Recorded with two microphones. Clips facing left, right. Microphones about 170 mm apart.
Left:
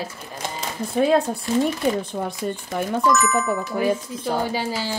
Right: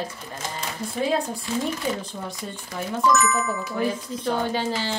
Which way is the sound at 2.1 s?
65° left (ahead or behind).